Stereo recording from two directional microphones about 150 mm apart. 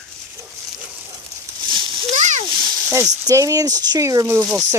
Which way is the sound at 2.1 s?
50° right (ahead or behind).